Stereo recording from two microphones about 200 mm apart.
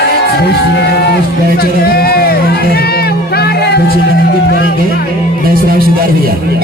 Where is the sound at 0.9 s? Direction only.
55° left (ahead or behind).